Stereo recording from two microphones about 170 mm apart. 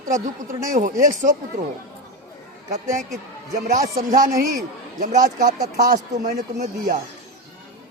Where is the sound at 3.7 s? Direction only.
50° right (ahead or behind).